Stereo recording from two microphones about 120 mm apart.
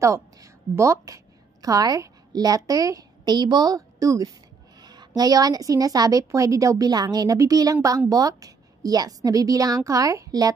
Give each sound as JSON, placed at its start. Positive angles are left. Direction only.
{"t": 0.0, "sound": "a woman's voice", "side_deg": -25}